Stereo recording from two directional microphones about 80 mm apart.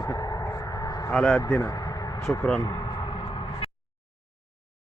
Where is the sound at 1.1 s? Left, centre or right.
Centre.